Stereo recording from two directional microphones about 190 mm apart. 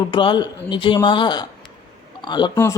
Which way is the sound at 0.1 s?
25° left (ahead or behind).